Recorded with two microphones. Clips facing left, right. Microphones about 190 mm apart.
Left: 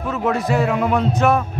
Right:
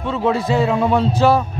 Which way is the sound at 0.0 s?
30° right (ahead or behind).